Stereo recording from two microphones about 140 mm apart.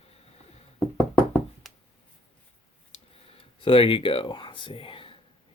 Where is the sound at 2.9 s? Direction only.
45° left (ahead or behind).